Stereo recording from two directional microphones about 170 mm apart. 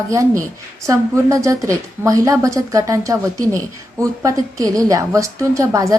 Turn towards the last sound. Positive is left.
turn(degrees=-20)  # may be behind; listen again after turning